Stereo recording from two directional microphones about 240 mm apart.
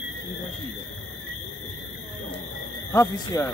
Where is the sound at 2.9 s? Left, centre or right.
Centre.